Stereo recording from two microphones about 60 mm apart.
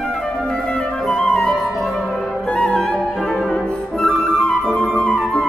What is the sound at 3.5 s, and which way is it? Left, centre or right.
Flute, centre.